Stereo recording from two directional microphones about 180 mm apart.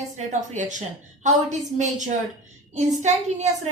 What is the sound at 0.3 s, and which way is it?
A woman's voice, 45° right (ahead or behind).